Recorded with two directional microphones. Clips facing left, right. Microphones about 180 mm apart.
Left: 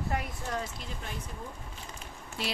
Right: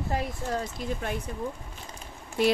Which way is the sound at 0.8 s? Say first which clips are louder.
Right 11 dB; 50° right (ahead or behind).